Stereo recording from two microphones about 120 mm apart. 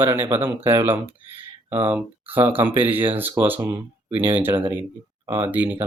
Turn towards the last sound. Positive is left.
turn(degrees=-15)  # may be behind; listen again after turning